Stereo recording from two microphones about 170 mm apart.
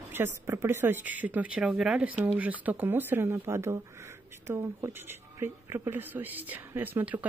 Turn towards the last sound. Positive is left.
turn(degrees=-10)  # may be behind; listen again after turning